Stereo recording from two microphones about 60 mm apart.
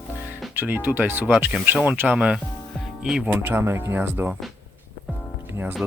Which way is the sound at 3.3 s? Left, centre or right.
Right.